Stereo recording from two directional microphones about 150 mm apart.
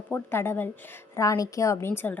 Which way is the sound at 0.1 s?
15° left (ahead or behind).